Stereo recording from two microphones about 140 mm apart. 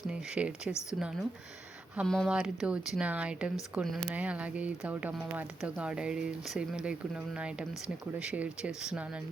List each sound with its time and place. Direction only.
0.1 s speech: 5° right (ahead or behind)
0.7 s a woman's voice: 20° left (ahead or behind)
2.0 s speech: 5° left (ahead or behind)